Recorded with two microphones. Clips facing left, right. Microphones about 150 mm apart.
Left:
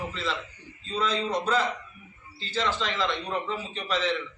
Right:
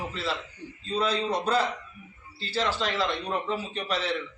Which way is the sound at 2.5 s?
35° right (ahead or behind).